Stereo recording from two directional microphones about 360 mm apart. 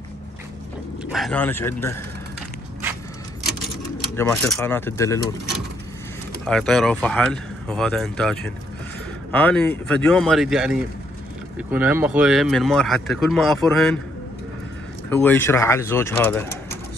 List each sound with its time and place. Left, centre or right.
1.1 s speech: centre
4.2 s speech: centre
6.4 s speech: centre
15.0 s speech: centre